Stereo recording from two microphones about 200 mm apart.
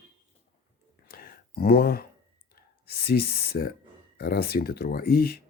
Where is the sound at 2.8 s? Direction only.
50° left (ahead or behind).